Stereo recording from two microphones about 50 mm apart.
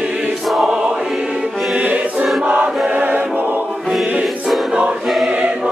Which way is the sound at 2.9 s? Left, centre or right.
Right.